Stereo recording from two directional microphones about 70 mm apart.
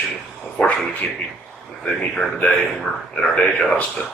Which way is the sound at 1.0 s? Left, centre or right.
Centre.